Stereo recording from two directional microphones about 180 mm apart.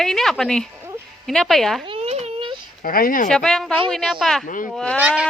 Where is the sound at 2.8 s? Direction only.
50° left (ahead or behind).